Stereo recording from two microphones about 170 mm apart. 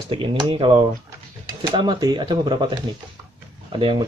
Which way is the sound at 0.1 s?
30° right (ahead or behind).